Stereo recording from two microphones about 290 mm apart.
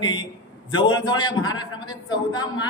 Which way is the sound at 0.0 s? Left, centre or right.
Centre.